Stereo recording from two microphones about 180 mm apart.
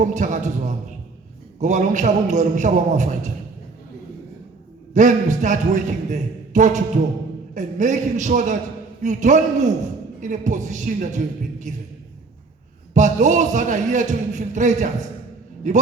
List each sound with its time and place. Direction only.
0.0 s a man's voice: 45° right (ahead or behind)
1.6 s a man's voice: 45° right (ahead or behind)
4.9 s a man's voice: 45° right (ahead or behind)
12.9 s a man's voice: 45° right (ahead or behind)